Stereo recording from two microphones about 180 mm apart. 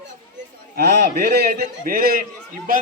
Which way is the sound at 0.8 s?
60° right (ahead or behind).